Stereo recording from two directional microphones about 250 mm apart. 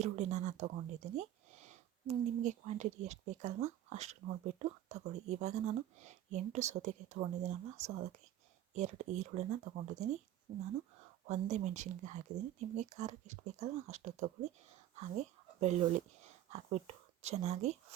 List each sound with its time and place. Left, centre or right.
0.0 s speech: right
11.3 s speech: right